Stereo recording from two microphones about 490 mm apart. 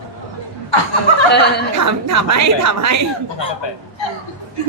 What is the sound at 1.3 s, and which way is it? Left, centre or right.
Speech, centre.